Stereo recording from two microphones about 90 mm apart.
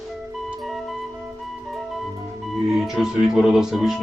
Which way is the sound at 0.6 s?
Centre (ahead or behind).